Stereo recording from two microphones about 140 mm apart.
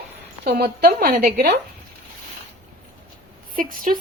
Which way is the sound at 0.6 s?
90° right.